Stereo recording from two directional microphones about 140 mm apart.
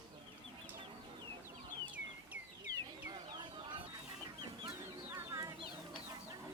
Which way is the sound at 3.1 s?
35° right (ahead or behind).